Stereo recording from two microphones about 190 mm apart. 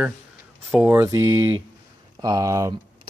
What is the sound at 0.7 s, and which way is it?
Speech, 10° right (ahead or behind).